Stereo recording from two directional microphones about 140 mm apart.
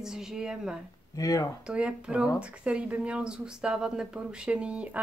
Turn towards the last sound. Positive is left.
turn(degrees=-10)  # may be behind; listen again after turning